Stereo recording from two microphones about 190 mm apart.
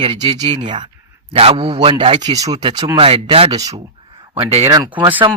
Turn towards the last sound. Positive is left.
turn(degrees=-20)  # may be behind; listen again after turning